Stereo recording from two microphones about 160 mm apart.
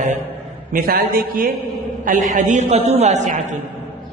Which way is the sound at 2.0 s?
50° right (ahead or behind).